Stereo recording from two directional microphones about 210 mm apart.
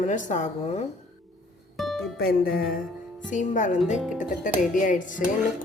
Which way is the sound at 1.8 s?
Centre (ahead or behind).